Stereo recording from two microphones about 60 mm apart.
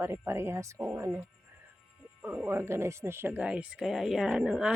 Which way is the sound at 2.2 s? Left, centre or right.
Right.